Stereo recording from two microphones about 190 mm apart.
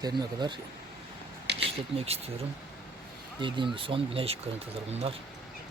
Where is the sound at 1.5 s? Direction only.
65° right (ahead or behind).